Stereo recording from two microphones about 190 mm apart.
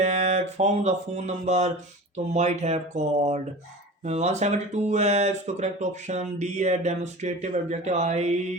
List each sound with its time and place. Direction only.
0.0 s mantra: 35° right (ahead or behind)
2.1 s speech: 35° right (ahead or behind)